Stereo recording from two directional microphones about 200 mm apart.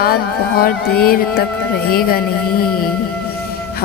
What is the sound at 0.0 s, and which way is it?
A woman's voice, 50° left (ahead or behind).